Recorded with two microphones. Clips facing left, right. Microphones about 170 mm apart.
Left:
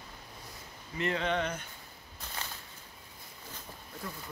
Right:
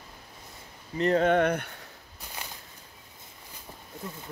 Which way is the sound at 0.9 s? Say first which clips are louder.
Right 9 dB; 40° right (ahead or behind).